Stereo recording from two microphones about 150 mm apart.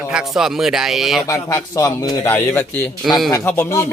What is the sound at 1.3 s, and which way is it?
A man's voice, 20° left (ahead or behind).